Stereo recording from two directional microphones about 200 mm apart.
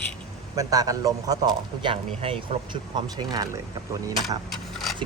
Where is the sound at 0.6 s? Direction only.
15° right (ahead or behind).